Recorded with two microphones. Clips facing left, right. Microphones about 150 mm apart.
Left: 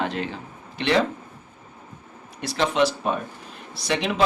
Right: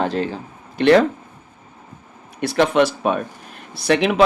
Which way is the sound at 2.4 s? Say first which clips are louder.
Right 5 dB; 60° right (ahead or behind).